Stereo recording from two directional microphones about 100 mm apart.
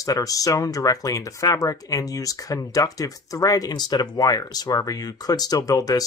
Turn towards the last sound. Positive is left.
turn(degrees=35)  # may be behind; listen again after turning